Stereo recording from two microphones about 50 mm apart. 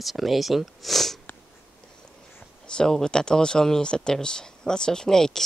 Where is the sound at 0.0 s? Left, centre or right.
Centre.